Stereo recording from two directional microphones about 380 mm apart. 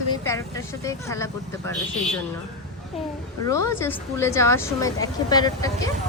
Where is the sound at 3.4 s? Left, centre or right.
Centre.